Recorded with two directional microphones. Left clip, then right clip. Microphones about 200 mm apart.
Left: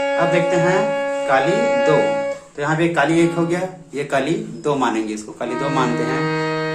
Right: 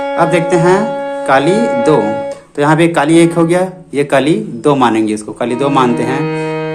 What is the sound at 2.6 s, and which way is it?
Speech, 50° right (ahead or behind).